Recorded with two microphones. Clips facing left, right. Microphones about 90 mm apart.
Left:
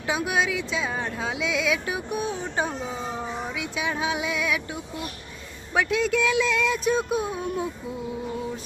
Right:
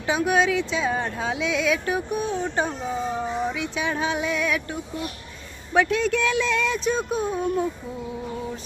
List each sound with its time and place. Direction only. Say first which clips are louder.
0.0 s speech: right 4 dB; 5° left (ahead or behind)